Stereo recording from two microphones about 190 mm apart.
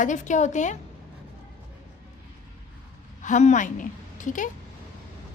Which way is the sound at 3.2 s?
40° left (ahead or behind).